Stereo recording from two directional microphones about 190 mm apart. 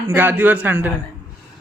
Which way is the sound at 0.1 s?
10° right (ahead or behind).